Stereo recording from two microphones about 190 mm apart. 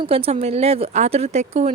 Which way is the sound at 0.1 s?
35° right (ahead or behind).